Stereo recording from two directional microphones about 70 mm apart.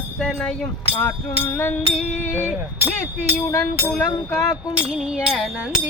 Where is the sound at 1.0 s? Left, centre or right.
Left.